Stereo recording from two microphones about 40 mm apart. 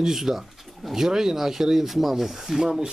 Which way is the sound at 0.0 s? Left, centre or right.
Centre.